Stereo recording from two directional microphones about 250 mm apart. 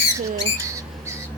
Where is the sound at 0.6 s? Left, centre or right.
Centre.